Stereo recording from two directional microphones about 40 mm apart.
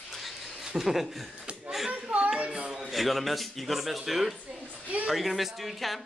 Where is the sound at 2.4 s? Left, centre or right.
Right.